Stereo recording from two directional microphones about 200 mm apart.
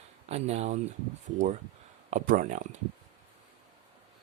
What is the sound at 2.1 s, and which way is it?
Speech, 40° right (ahead or behind).